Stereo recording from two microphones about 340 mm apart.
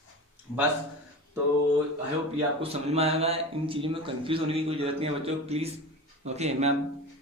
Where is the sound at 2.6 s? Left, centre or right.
Centre.